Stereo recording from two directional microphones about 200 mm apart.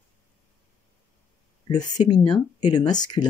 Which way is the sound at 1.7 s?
20° left (ahead or behind).